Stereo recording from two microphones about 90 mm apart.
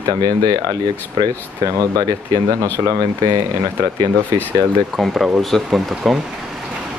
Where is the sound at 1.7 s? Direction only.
40° right (ahead or behind).